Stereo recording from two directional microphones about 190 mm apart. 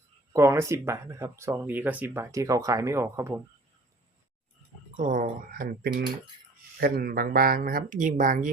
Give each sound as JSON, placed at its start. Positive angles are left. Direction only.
{"t": 0.3, "sound": "speech", "side_deg": -15}
{"t": 4.9, "sound": "speech", "side_deg": -40}